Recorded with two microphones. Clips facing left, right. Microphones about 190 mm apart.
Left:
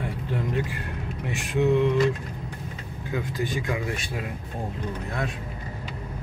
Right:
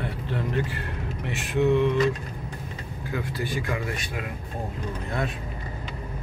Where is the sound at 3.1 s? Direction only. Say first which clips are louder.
Left 2 dB; 20° left (ahead or behind).